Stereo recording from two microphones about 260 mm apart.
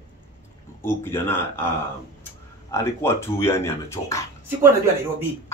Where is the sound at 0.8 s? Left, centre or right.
Centre.